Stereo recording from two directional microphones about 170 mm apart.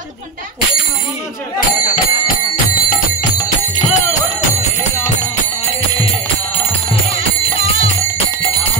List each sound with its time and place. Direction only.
3.9 s music: 45° left (ahead or behind)